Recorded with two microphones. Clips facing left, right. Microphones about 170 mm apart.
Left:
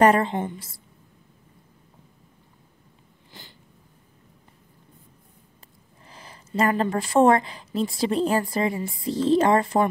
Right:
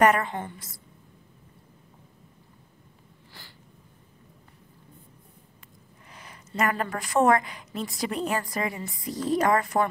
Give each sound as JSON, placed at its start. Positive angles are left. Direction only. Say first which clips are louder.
{"t": 0.0, "sound": "speech", "louder": "left 3 dB", "side_deg": 30}
{"t": 3.4, "sound": "cat", "louder": "left 4 dB", "side_deg": 20}
{"t": 6.1, "sound": "speech", "louder": "left 4 dB", "side_deg": 30}